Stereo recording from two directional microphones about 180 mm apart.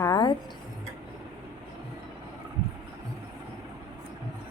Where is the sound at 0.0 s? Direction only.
25° left (ahead or behind).